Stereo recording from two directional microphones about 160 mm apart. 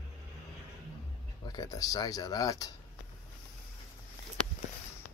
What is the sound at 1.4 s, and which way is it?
Speech, 25° left (ahead or behind).